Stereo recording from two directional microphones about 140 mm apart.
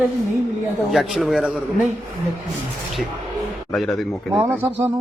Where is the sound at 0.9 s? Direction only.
5° right (ahead or behind).